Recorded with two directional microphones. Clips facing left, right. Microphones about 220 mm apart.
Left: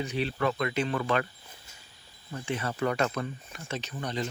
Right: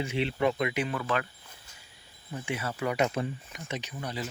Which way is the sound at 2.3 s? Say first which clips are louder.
Left 1 dB; 10° right (ahead or behind).